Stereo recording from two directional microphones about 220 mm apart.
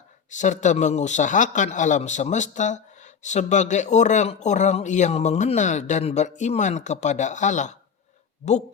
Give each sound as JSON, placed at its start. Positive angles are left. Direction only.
{"t": 0.3, "sound": "speech", "side_deg": 35}